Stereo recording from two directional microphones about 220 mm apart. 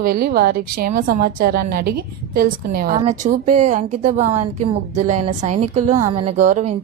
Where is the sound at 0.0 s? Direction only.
40° right (ahead or behind).